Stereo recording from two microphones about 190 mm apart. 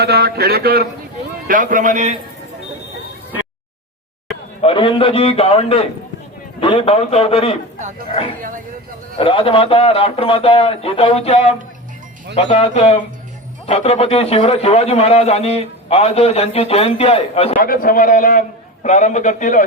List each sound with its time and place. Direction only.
0.0 s speech: 55° right (ahead or behind)
1.5 s a man's voice: 45° right (ahead or behind)
4.6 s a man's voice: 25° left (ahead or behind)
8.4 s a man's voice: 45° right (ahead or behind)
9.1 s a man's voice: 30° left (ahead or behind)
17.6 s a man's voice: 50° left (ahead or behind)